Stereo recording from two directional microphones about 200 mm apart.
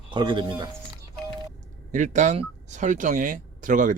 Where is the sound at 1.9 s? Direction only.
40° right (ahead or behind).